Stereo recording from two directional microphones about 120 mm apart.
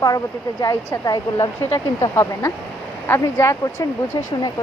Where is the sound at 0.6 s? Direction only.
30° left (ahead or behind).